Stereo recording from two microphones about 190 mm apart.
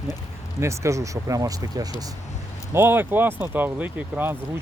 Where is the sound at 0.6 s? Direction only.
15° right (ahead or behind).